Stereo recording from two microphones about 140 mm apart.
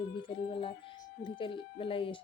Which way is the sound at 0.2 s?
35° left (ahead or behind).